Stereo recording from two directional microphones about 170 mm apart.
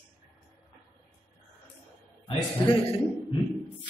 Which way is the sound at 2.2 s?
30° left (ahead or behind).